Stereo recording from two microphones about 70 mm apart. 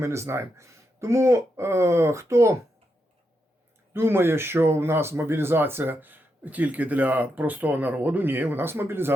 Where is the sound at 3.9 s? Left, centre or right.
Right.